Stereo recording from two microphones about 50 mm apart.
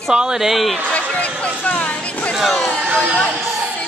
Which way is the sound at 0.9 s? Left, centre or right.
Left.